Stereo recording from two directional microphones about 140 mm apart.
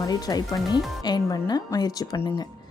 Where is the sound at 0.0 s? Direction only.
25° left (ahead or behind).